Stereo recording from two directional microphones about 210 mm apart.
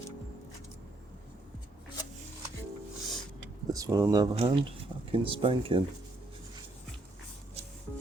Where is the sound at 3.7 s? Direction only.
15° right (ahead or behind).